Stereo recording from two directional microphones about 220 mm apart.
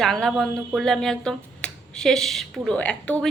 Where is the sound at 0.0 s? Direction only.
Centre (ahead or behind).